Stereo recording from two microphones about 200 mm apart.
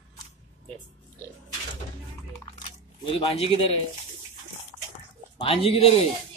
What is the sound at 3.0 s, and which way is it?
Speech, 30° left (ahead or behind).